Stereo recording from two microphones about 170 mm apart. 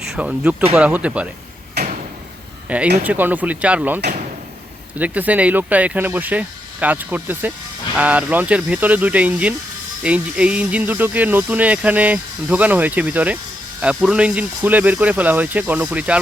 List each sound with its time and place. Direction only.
0.2 s speech: 5° right (ahead or behind)
1.8 s door: 70° right (ahead or behind)
2.6 s speech: 5° right (ahead or behind)